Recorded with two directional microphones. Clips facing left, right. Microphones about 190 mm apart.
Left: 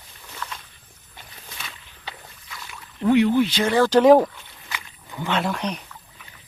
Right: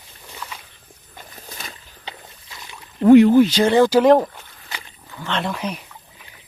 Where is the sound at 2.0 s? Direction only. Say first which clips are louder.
Right 1 dB; 20° right (ahead or behind).